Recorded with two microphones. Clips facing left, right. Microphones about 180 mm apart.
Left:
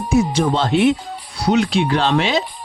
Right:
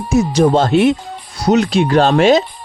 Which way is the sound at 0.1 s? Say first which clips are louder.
Right 5 dB; 40° right (ahead or behind).